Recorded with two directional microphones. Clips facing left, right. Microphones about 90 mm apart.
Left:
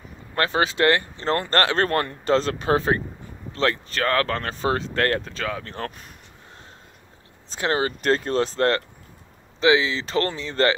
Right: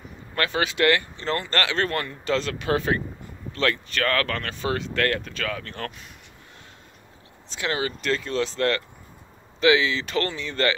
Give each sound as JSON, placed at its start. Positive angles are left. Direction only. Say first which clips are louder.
{"t": 0.4, "sound": "speech", "louder": "left 2 dB", "side_deg": 30}
{"t": 7.4, "sound": "speech", "louder": "left 4 dB", "side_deg": 35}